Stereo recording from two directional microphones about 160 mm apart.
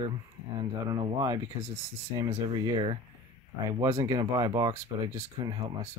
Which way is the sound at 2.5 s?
30° right (ahead or behind).